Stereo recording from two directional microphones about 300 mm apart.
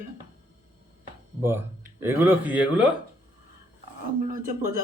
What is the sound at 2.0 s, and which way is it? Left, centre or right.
Speech, centre.